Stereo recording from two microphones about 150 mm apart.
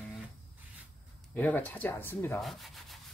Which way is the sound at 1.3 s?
10° left (ahead or behind).